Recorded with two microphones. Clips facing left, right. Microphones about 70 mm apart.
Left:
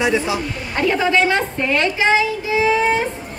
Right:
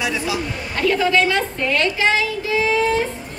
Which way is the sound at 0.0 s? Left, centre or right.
Left.